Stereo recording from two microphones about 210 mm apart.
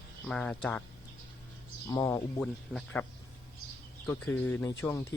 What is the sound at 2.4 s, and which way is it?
Speech, centre (ahead or behind).